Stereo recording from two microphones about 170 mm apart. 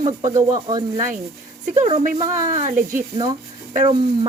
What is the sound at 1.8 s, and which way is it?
Speech, 45° right (ahead or behind).